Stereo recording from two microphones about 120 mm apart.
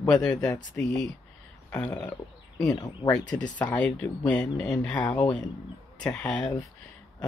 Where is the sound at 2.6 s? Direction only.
30° left (ahead or behind).